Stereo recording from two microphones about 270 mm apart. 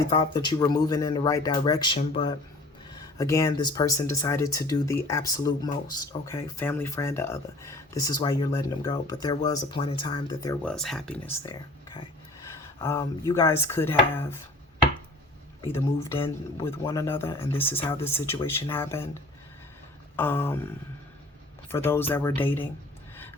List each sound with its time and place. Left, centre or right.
0.1 s speech: centre
2.9 s speech: centre
12.8 s speech: centre
15.6 s speech: centre
20.1 s speech: centre
21.7 s speech: centre